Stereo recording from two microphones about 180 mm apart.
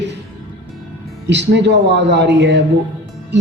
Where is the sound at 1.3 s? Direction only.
75° right (ahead or behind).